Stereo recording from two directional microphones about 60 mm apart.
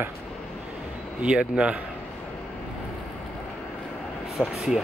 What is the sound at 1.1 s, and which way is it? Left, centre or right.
Speech, centre.